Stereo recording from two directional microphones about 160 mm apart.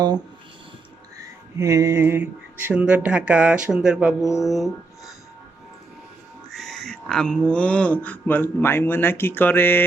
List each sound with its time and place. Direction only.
1.5 s speech: 20° right (ahead or behind); by 5.1 s centre (ahead or behind)
6.5 s speech: centre (ahead or behind)